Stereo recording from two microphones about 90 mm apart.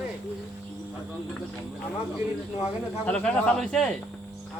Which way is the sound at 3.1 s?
10° left (ahead or behind).